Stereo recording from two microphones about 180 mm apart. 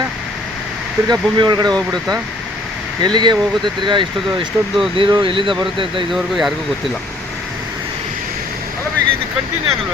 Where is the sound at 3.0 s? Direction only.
25° right (ahead or behind).